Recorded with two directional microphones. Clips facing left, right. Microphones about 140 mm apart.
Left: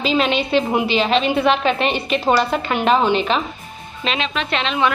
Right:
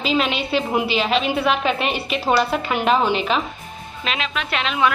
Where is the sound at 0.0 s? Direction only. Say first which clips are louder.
Left 3 dB; centre (ahead or behind).